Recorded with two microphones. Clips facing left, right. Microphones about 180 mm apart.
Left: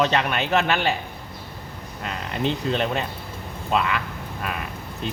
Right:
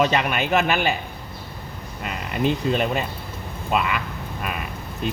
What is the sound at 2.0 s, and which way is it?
A man's voice, 10° right (ahead or behind).